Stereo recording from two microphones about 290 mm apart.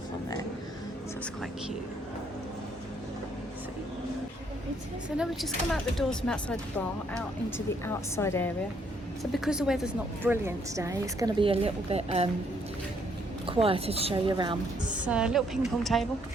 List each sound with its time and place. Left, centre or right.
5.1 s a woman's voice: centre
9.3 s a woman's voice: centre; by 12.3 s right
13.5 s a woman's voice: centre
14.9 s speech: centre